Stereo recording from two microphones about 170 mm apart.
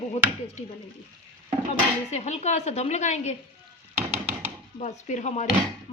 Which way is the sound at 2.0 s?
40° left (ahead or behind).